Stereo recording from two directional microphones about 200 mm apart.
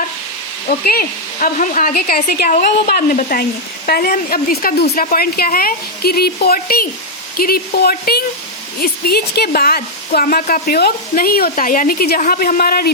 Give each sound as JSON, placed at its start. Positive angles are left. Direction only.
{"t": 0.7, "sound": "a woman's voice", "side_deg": 45}